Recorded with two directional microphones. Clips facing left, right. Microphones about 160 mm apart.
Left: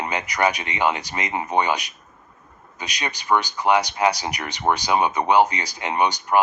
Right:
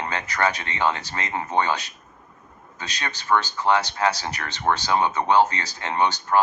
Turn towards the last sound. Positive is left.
turn(degrees=15)  # may be behind; listen again after turning